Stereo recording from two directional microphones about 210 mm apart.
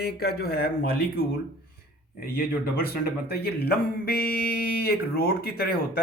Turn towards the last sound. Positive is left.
turn(degrees=45)  # may be behind; listen again after turning